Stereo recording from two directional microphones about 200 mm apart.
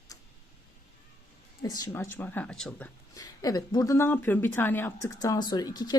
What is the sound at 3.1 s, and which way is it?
Speech, 20° left (ahead or behind).